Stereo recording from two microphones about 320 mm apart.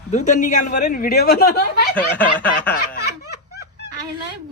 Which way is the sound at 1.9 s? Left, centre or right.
Centre.